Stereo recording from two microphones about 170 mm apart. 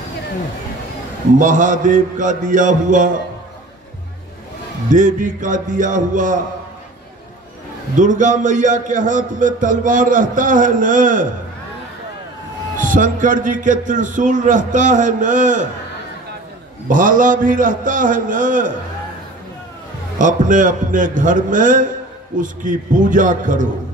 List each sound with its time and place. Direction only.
1.4 s a man's voice: 50° right (ahead or behind)
4.8 s a man's voice: 50° right (ahead or behind)
7.9 s a man's voice: 50° right (ahead or behind)
12.7 s a man's voice: 50° right (ahead or behind)
16.8 s a man's voice: 50° right (ahead or behind)
20.2 s a man's voice: 50° right (ahead or behind)